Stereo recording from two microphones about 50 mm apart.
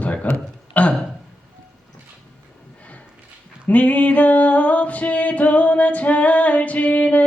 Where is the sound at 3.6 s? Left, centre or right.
Left.